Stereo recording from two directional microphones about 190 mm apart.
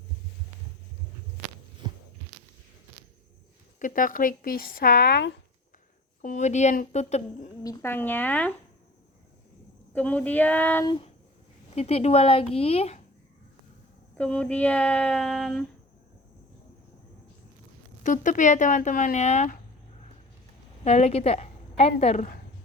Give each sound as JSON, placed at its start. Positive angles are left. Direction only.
{"t": 3.8, "sound": "speech", "side_deg": 45}
{"t": 6.2, "sound": "speech", "side_deg": 40}
{"t": 7.6, "sound": "speech", "side_deg": 15}
{"t": 9.9, "sound": "speech", "side_deg": 5}
{"t": 11.7, "sound": "speech", "side_deg": 35}
{"t": 14.2, "sound": "speech", "side_deg": 5}
{"t": 18.0, "sound": "speech", "side_deg": 45}
{"t": 20.8, "sound": "a woman's voice", "side_deg": 35}